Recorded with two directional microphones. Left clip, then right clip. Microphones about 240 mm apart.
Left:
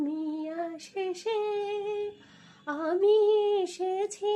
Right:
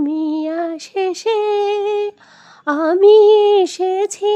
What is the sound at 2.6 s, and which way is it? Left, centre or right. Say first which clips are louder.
Female singing: right 15 dB; right.